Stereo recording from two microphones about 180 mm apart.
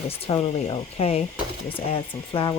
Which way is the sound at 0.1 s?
30° left (ahead or behind).